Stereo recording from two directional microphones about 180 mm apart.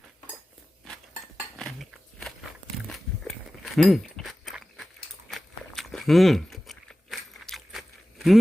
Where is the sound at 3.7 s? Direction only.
Centre (ahead or behind).